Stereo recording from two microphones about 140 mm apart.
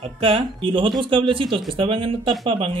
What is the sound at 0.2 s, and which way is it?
Speech, 40° right (ahead or behind).